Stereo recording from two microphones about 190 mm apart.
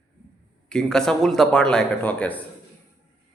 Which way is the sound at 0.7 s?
5° left (ahead or behind).